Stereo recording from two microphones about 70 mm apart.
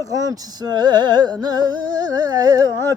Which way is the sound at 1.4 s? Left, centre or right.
Right.